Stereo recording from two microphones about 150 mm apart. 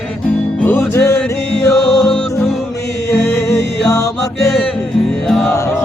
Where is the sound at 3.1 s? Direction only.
20° left (ahead or behind).